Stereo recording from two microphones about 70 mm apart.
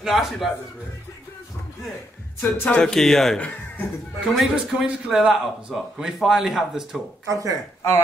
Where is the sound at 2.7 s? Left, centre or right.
Centre.